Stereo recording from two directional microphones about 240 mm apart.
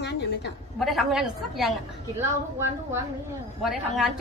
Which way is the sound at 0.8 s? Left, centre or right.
Centre.